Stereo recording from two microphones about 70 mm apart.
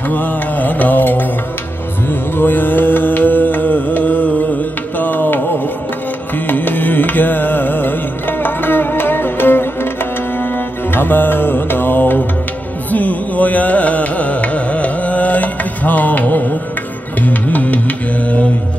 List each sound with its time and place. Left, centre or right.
0.1 s mantra: left
6.3 s music: left
12.9 s carnatic music: left
17.2 s music: left